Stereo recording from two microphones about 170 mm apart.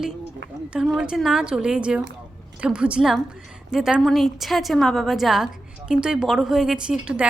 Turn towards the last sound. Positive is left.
turn(degrees=-5)  # may be behind; listen again after turning